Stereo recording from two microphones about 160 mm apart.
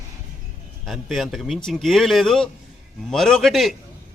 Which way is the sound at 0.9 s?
Centre (ahead or behind).